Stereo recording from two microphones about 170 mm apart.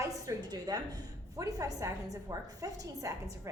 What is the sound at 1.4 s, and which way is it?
A woman's voice, 20° right (ahead or behind).